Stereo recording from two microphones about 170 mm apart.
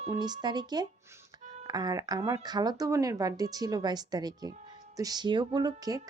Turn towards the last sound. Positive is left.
turn(degrees=-20)  # may be behind; listen again after turning